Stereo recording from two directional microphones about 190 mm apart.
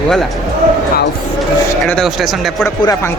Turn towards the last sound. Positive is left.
turn(degrees=15)  # may be behind; listen again after turning